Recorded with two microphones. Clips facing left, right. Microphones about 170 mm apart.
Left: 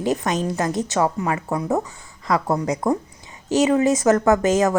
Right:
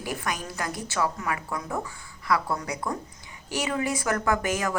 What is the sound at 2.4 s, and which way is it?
Speech, 40° left (ahead or behind).